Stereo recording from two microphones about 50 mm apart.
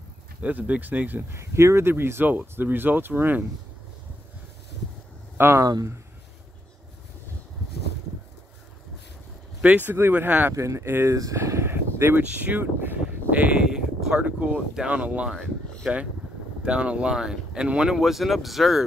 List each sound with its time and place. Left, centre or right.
0.4 s speech: right
1.3 s speech: right
1.9 s speech: right
5.4 s speech: right
9.6 s speech: right
10.5 s speech: right
11.7 s a sound: right
12.2 s speech: right
13.6 s a sound: centre
14.1 s speech: right
15.3 s speech: centre
16.6 s speech: centre
17.9 s speech: centre